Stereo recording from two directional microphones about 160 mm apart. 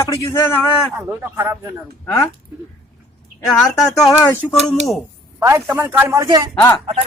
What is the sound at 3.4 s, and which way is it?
Speech, centre (ahead or behind).